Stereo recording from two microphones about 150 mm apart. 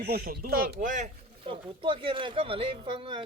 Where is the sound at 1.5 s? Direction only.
35° right (ahead or behind).